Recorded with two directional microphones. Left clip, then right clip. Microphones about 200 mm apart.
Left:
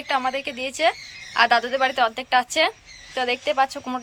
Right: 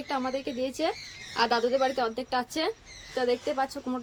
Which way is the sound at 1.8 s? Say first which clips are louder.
Left 7 dB; centre (ahead or behind).